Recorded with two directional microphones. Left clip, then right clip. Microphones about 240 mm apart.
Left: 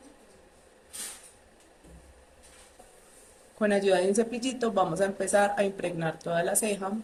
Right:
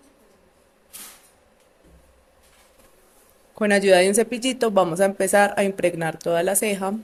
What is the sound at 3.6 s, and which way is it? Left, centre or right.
Speech, right.